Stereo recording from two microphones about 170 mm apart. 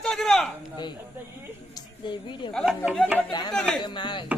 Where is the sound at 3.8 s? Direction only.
25° left (ahead or behind).